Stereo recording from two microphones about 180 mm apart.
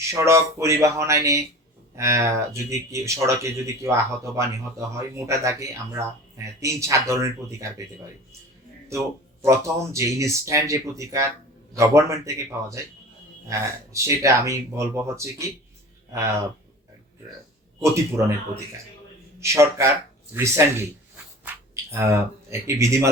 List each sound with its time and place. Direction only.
0.1 s speech: 15° right (ahead or behind)
9.4 s speech: 15° right (ahead or behind)
17.7 s speech: 15° right (ahead or behind)
19.4 s speech: 15° right (ahead or behind)